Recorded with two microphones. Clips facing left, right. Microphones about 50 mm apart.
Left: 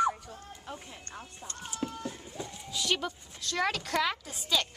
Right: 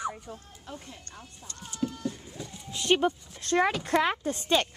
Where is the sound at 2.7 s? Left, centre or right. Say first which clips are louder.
Right 7 dB; right.